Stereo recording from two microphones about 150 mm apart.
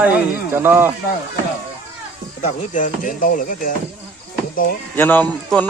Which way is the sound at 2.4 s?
55° left (ahead or behind).